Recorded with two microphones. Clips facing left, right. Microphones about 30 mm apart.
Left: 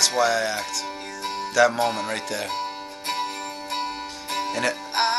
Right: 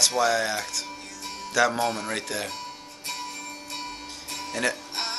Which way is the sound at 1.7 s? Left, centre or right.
Left.